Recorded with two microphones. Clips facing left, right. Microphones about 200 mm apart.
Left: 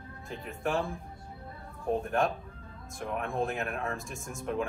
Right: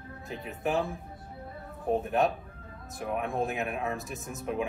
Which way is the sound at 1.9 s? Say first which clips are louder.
Right 2 dB; 5° right (ahead or behind).